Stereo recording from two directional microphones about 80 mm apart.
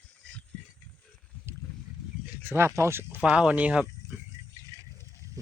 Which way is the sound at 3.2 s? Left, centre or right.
Centre.